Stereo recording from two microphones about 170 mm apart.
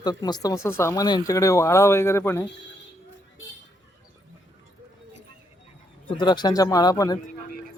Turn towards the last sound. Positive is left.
turn(degrees=20)  # may be behind; listen again after turning